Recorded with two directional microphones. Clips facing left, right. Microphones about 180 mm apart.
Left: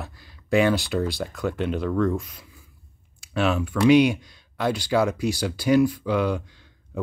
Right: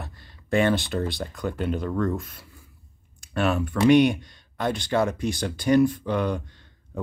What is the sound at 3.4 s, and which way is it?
Speech, centre (ahead or behind).